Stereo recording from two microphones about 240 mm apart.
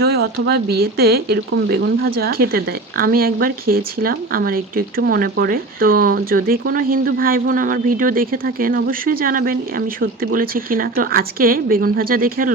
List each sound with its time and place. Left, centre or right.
0.0 s speech: right